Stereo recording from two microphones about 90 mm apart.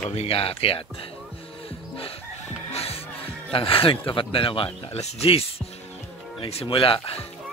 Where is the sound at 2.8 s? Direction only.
90° left.